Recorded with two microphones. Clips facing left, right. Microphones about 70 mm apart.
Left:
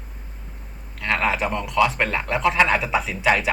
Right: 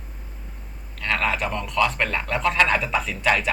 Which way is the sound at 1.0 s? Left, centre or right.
Centre.